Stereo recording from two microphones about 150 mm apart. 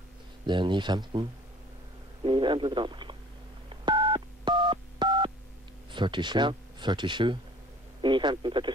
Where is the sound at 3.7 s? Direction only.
30° right (ahead or behind).